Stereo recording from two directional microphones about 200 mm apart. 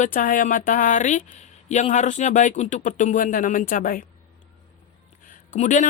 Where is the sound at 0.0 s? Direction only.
40° left (ahead or behind).